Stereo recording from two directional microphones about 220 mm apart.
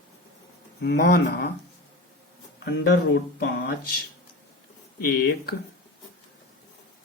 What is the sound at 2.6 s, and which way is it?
Speech, 50° left (ahead or behind).